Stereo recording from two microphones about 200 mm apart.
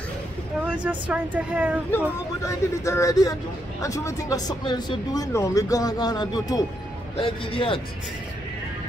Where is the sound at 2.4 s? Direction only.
15° left (ahead or behind).